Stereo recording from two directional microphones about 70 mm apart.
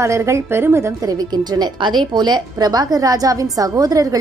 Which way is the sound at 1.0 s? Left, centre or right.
Right.